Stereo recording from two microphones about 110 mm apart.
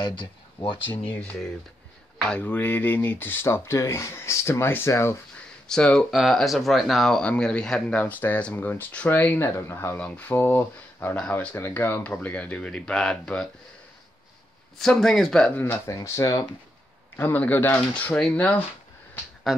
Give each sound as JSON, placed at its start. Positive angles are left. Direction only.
{"t": 0.0, "sound": "speech", "side_deg": 45}
{"t": 0.8, "sound": "speech", "side_deg": 15}
{"t": 5.7, "sound": "speech", "side_deg": 5}
{"t": 14.8, "sound": "speech", "side_deg": 5}
{"t": 15.5, "sound": "speech", "side_deg": 20}
{"t": 16.0, "sound": "speech", "side_deg": 30}
{"t": 17.2, "sound": "speech", "side_deg": 15}